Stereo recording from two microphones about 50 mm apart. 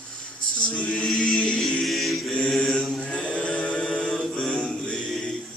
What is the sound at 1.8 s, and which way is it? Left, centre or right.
Mantra, centre.